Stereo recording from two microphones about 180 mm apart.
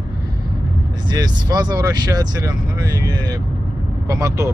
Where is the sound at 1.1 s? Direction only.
25° right (ahead or behind).